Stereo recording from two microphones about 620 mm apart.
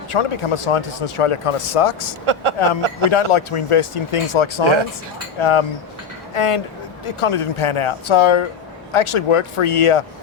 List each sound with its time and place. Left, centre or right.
0.1 s speech: left
2.2 s speech: right
3.1 s speech: left